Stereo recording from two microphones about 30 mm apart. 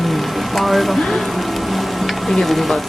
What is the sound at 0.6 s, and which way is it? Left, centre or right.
Speech, centre.